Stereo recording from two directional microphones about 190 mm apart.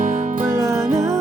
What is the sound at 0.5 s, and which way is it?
Music, 15° right (ahead or behind).